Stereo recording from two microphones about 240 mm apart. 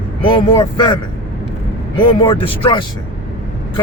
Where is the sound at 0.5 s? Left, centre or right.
Centre.